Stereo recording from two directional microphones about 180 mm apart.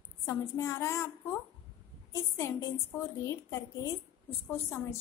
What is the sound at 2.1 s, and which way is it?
A woman's voice, 15° left (ahead or behind).